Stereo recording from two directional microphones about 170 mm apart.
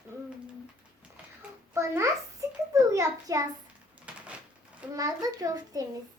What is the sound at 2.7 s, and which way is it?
Speech, 20° right (ahead or behind).